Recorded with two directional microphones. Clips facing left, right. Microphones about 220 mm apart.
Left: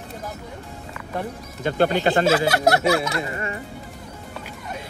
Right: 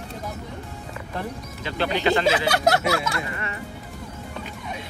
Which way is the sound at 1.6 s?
50° left (ahead or behind).